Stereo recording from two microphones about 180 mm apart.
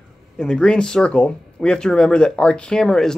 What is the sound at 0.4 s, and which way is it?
Speech, 5° left (ahead or behind).